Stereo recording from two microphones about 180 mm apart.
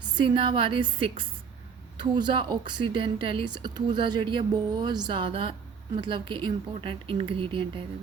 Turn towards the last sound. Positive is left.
turn(degrees=-30)  # may be behind; listen again after turning